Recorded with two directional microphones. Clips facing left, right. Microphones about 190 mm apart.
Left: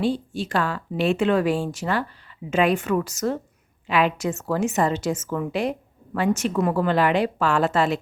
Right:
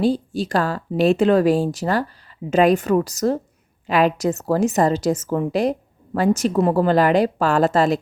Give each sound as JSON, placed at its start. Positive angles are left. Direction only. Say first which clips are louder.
{"t": 0.0, "sound": "a woman's voice", "louder": "right 4 dB", "side_deg": -40}